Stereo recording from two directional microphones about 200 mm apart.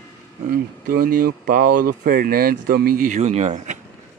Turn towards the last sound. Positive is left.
turn(degrees=-35)  # may be behind; listen again after turning